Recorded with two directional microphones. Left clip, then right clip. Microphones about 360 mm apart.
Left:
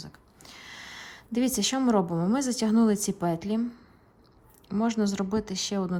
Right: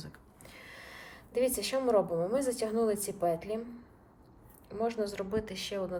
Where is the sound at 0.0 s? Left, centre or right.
Centre.